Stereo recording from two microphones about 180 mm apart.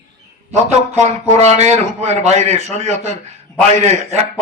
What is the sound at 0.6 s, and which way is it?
A man's voice, 40° right (ahead or behind).